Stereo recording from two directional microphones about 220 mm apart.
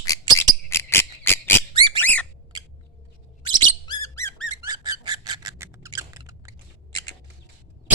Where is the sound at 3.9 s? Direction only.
15° left (ahead or behind).